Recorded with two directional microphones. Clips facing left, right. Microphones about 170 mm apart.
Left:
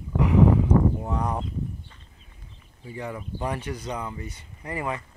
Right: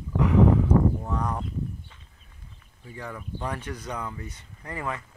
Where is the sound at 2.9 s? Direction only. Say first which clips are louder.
Left 3 dB; 15° left (ahead or behind).